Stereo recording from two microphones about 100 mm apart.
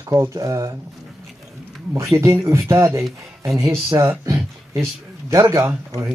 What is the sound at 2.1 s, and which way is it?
Speech, 30° right (ahead or behind).